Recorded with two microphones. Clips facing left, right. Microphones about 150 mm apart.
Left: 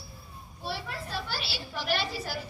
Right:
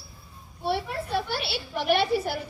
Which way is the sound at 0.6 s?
60° right (ahead or behind).